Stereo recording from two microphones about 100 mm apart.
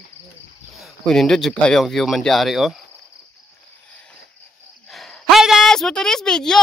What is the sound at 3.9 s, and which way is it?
Cricket, 10° left (ahead or behind).